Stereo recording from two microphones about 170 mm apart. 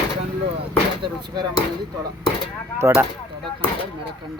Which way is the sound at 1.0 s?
25° right (ahead or behind).